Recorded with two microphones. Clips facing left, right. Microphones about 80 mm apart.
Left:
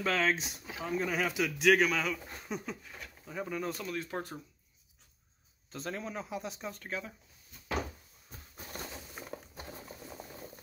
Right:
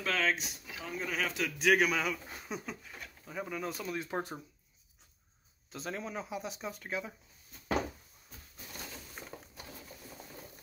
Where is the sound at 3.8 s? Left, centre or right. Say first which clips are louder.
Right 1 dB; centre.